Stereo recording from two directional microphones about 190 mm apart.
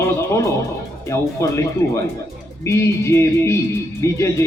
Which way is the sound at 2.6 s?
15° left (ahead or behind).